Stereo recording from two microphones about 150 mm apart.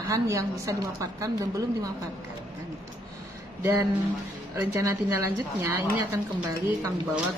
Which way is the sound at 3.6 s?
20° right (ahead or behind).